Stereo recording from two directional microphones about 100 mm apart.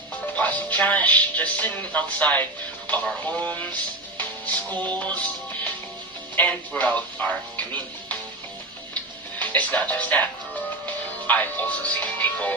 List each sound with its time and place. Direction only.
0.3 s speech: 15° left (ahead or behind)
4.2 s music: 15° left (ahead or behind)
4.9 s speech: 15° left (ahead or behind)
6.3 s speech: 15° left (ahead or behind)
9.4 s speech: 15° left (ahead or behind)